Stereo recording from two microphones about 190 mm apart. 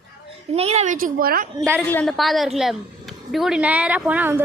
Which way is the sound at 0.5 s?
35° right (ahead or behind).